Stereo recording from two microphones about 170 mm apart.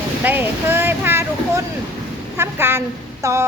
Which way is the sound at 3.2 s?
20° right (ahead or behind).